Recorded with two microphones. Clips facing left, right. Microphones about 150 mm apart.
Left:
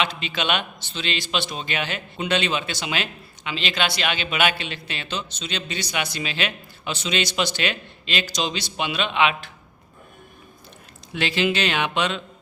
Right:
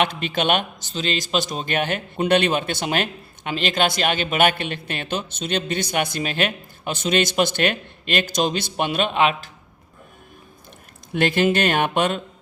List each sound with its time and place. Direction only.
0.0 s a man's voice: 55° right (ahead or behind)
11.1 s a man's voice: 50° right (ahead or behind)